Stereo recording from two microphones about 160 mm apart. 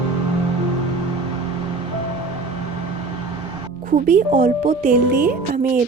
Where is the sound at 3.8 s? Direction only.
55° right (ahead or behind).